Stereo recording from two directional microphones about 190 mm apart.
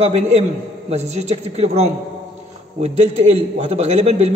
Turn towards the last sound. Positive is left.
turn(degrees=-35)  # may be behind; listen again after turning